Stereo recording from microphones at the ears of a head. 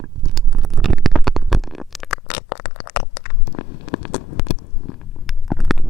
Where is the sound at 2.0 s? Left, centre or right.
Left.